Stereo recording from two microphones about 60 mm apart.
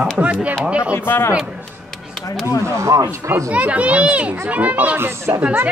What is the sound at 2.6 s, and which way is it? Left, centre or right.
Speech, right.